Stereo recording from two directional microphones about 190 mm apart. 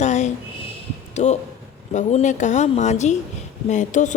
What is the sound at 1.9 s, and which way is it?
A woman's voice, 40° left (ahead or behind).